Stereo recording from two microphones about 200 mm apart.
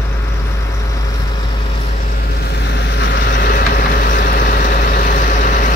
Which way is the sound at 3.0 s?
55° left (ahead or behind).